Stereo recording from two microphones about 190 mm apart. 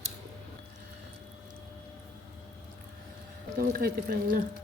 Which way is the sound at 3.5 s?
50° right (ahead or behind).